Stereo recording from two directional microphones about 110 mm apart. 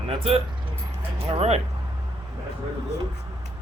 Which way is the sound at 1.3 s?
75° right (ahead or behind).